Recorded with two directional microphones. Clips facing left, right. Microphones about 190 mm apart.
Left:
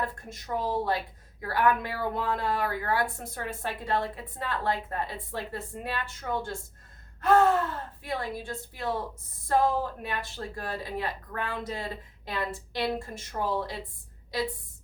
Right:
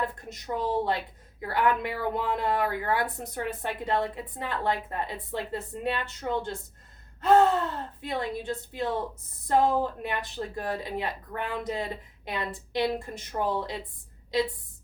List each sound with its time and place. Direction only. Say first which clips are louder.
0.0 s speech: right 2 dB; 20° right (ahead or behind)